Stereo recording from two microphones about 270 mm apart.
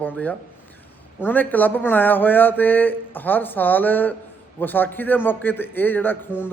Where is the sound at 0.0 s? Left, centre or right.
Centre.